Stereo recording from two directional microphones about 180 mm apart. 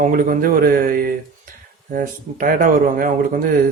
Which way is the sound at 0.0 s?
50° right (ahead or behind).